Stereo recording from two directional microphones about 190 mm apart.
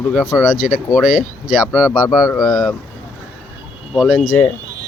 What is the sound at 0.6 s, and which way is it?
Speech, centre (ahead or behind).